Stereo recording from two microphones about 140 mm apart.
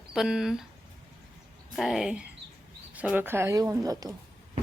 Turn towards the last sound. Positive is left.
turn(degrees=-25)  # may be behind; listen again after turning